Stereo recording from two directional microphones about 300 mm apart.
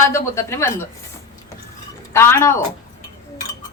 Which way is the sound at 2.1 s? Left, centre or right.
Centre.